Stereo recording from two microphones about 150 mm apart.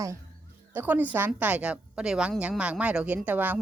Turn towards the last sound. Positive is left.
turn(degrees=-10)  # may be behind; listen again after turning